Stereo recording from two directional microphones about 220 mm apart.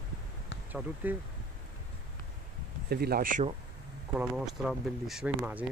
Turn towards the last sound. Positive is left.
turn(degrees=-5)  # may be behind; listen again after turning